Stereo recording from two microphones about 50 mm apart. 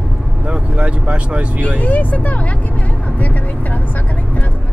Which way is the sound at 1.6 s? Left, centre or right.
Left.